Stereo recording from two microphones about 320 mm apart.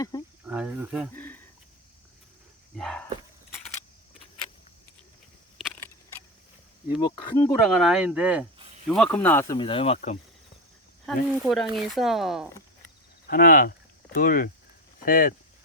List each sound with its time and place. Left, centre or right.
0.4 s speech: centre
2.7 s speech: centre
5.5 s a sound: centre
7.3 s speech: centre
11.0 s speech: centre
13.3 s speech: left